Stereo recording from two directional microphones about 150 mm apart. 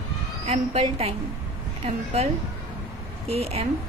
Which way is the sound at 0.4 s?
40° right (ahead or behind).